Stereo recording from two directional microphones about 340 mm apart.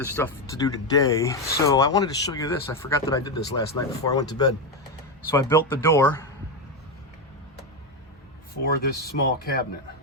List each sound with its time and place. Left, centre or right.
0.0 s speech: centre
8.6 s speech: left